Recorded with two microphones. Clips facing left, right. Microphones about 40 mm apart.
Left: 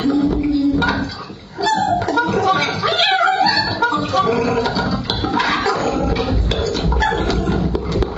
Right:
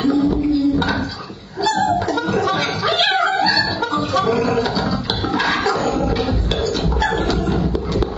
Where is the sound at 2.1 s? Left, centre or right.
Centre.